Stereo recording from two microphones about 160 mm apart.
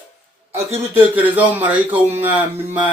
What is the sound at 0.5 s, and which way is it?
Speech, 10° right (ahead or behind).